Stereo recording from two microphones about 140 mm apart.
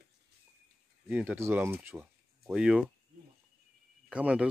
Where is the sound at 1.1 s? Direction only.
10° right (ahead or behind).